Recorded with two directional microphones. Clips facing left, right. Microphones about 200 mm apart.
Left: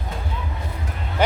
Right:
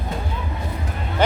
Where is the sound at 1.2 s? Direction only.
10° left (ahead or behind).